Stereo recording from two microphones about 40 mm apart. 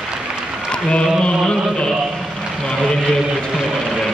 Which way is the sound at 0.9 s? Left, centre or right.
Left.